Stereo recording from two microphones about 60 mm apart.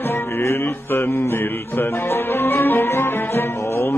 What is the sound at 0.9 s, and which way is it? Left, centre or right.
Music, left.